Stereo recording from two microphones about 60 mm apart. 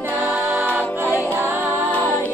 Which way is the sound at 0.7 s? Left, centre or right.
Right.